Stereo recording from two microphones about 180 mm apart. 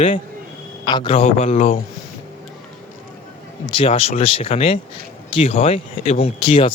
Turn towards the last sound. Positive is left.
turn(degrees=30)  # may be behind; listen again after turning